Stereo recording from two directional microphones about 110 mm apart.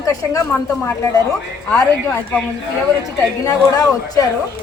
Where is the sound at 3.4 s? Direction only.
35° left (ahead or behind).